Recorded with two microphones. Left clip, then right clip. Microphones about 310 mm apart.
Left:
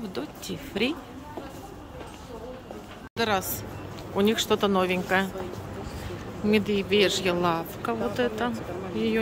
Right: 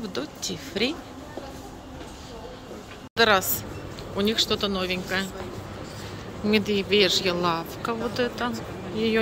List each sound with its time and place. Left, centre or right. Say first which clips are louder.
0.1 s speech: right 3 dB; centre
3.2 s a woman's voice: right 6 dB; centre
6.4 s speech: right 1 dB; centre